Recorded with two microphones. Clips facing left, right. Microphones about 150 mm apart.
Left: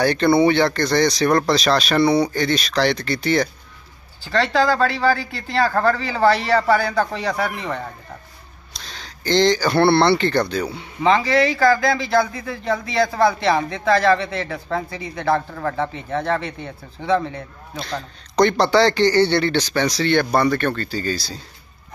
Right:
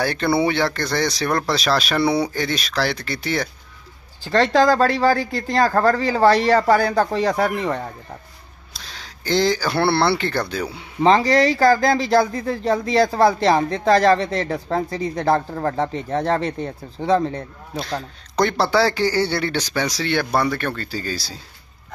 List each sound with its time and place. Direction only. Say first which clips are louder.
0.0 s speech: left 4 dB; 5° right (ahead or behind)
4.2 s speech: right 3 dB; 40° right (ahead or behind)
8.7 s speech: left 1 dB; 5° right (ahead or behind)
11.0 s speech: right 2 dB; 40° right (ahead or behind)
17.7 s a man's voice: right 2 dB; 5° right (ahead or behind)